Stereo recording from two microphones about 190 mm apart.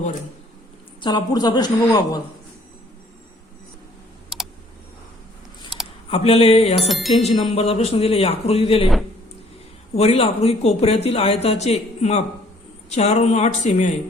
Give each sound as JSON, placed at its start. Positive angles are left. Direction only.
{"t": 1.0, "sound": "a woman's voice", "side_deg": 20}
{"t": 6.1, "sound": "speech", "side_deg": 30}
{"t": 6.7, "sound": "music", "side_deg": 0}
{"t": 7.2, "sound": "speech", "side_deg": 35}
{"t": 9.9, "sound": "speech", "side_deg": 30}